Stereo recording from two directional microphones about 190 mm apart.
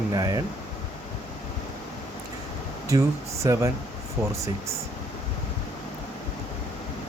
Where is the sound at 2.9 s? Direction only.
15° right (ahead or behind).